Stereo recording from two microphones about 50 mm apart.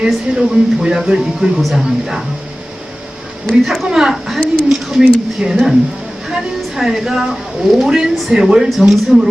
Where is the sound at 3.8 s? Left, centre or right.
Centre.